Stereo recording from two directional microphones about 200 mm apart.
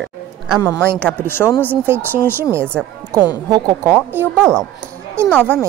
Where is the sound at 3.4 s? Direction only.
20° right (ahead or behind).